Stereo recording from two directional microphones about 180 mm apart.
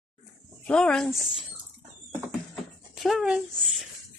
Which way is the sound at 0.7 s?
5° left (ahead or behind).